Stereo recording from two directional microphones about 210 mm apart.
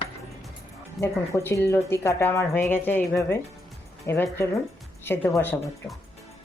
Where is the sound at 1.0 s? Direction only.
10° left (ahead or behind).